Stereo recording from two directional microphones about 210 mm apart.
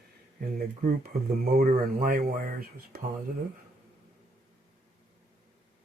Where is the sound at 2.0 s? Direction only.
45° right (ahead or behind).